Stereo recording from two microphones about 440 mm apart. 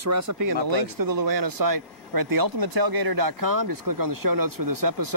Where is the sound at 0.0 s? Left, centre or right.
Right.